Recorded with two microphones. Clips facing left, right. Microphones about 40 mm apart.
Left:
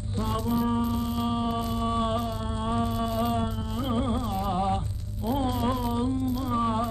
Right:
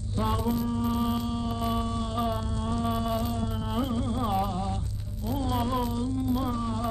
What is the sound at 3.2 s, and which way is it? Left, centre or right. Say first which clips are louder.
Music: left 4 dB; left.